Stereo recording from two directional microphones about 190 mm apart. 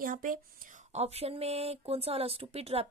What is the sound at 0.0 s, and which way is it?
Speech, 45° right (ahead or behind).